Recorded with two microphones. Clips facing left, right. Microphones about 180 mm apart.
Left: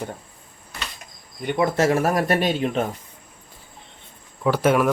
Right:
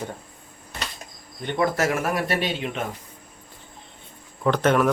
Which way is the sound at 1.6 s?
25° left (ahead or behind).